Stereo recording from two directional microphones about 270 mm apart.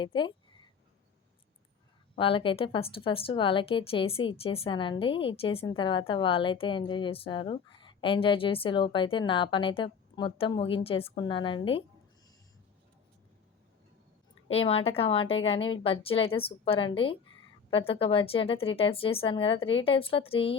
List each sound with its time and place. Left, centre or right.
0.0 s a sound: centre
2.1 s a woman's voice: centre
14.5 s a woman's voice: left